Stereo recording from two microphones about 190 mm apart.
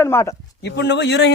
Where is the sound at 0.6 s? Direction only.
65° left (ahead or behind).